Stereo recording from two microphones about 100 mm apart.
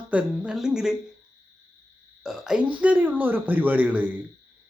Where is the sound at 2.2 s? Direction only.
5° right (ahead or behind).